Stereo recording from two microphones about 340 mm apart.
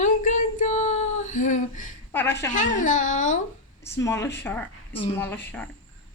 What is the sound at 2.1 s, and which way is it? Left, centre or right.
Speech, centre.